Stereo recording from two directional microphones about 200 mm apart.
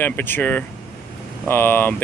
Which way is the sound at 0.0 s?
10° left (ahead or behind).